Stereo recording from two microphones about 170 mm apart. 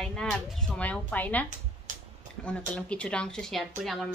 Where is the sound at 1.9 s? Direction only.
50° right (ahead or behind).